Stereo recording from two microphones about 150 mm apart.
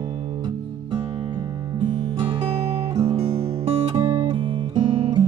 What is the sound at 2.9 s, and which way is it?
Guitar, 25° right (ahead or behind).